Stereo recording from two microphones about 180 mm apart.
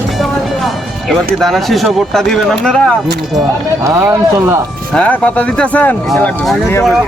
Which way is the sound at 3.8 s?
15° right (ahead or behind).